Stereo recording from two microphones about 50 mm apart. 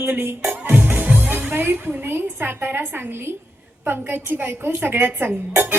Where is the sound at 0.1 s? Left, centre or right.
Right.